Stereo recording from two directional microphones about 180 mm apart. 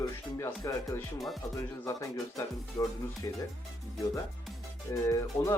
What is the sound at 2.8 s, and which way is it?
Speech, 20° left (ahead or behind).